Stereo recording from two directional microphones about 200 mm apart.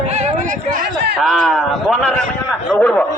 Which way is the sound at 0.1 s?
35° right (ahead or behind).